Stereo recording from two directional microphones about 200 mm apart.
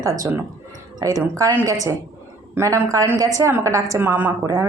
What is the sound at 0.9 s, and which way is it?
A woman's voice, 15° right (ahead or behind).